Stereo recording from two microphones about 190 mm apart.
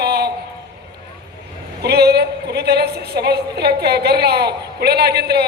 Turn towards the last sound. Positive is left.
turn(degrees=-60)  # may be behind; listen again after turning